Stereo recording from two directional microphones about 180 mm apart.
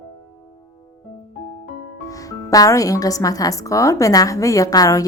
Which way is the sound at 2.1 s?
20° left (ahead or behind).